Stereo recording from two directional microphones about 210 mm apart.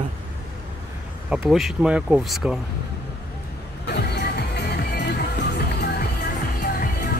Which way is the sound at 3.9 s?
50° left (ahead or behind).